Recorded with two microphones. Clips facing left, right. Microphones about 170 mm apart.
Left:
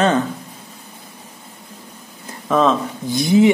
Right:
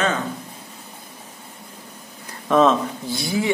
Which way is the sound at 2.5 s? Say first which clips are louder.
Even; centre (ahead or behind).